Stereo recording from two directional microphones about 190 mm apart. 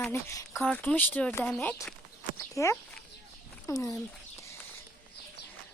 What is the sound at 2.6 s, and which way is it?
Speech, 15° left (ahead or behind).